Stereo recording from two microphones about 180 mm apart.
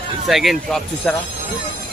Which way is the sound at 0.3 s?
Centre (ahead or behind).